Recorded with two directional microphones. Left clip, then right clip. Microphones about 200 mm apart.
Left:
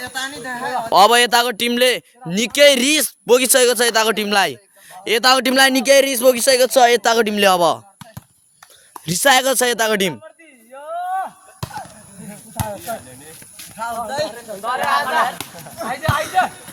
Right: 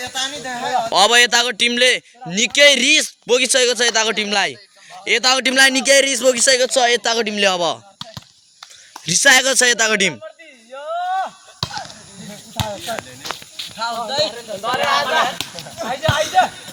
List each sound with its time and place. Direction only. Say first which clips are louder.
0.0 s speech: right 2 dB; 30° right (ahead or behind)
0.9 s speech: left 2 dB; 25° left (ahead or behind)
6.6 s speech: left 3 dB; 40° left (ahead or behind); by 10.2 s 15° left (ahead or behind)
10.8 s a sound: right 2 dB; 25° right (ahead or behind)
12.5 s snake: right 2 dB; 5° right (ahead or behind)
13.7 s speech: right 2 dB; centre (ahead or behind)
14.6 s speech: right 1 dB; 20° right (ahead or behind)
15.9 s speech: right 2 dB; 35° right (ahead or behind)